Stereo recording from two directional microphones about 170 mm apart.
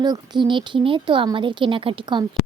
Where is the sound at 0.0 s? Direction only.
25° right (ahead or behind).